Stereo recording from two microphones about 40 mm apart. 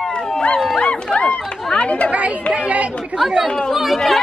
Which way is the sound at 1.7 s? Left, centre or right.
Left.